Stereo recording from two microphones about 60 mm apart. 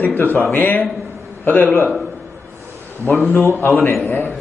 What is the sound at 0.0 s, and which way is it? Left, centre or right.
A man's voice, left.